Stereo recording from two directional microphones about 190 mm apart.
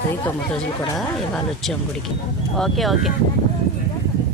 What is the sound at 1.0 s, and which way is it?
Speech, centre (ahead or behind).